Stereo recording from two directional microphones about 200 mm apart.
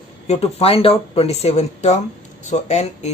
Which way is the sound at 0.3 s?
30° left (ahead or behind).